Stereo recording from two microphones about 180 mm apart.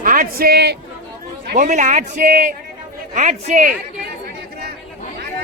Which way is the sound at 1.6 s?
45° right (ahead or behind).